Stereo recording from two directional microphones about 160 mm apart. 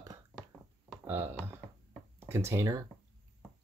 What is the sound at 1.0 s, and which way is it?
Speech, 15° right (ahead or behind).